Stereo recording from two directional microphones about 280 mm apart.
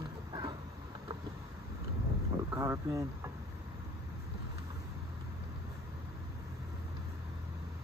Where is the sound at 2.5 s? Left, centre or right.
Centre.